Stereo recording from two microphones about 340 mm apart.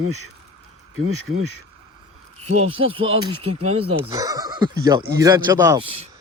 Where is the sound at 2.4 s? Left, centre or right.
Centre.